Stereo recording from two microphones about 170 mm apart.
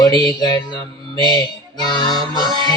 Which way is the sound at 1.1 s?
25° left (ahead or behind).